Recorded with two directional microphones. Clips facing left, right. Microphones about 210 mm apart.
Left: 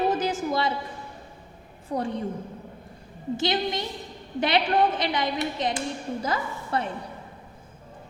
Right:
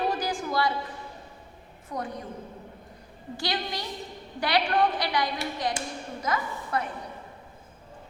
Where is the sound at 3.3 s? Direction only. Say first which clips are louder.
Left 6 dB; 20° left (ahead or behind).